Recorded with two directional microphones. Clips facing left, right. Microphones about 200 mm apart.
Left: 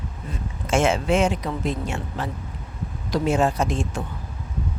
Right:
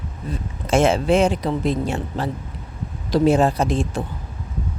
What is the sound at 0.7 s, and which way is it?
Speech, 35° right (ahead or behind).